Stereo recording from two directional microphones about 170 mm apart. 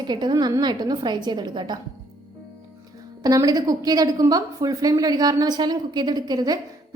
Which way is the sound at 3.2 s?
20° right (ahead or behind).